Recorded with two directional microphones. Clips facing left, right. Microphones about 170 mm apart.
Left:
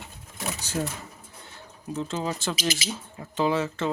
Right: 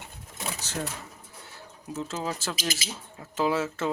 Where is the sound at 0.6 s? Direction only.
10° left (ahead or behind).